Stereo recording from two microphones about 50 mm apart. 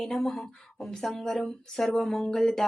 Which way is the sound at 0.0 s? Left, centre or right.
Centre.